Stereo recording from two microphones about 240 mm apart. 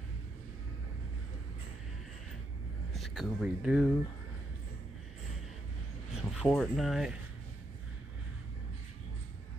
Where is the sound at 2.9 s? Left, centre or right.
Centre.